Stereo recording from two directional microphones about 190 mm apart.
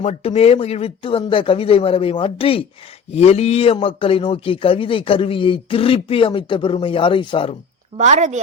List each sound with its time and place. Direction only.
0.0 s a man's voice: 35° left (ahead or behind)
7.9 s a woman's voice: 40° right (ahead or behind)